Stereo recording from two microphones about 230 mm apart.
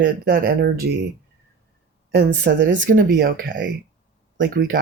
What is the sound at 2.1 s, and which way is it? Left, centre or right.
Speech, right.